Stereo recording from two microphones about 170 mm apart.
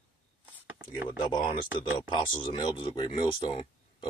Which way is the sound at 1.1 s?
25° left (ahead or behind).